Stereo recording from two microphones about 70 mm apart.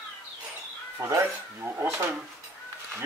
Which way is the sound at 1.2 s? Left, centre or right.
Right.